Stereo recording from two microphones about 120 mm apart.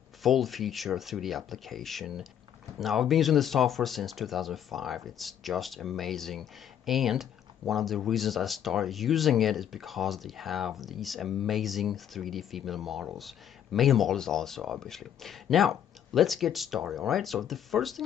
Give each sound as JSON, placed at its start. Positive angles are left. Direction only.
{"t": 0.2, "sound": "speech", "side_deg": 0}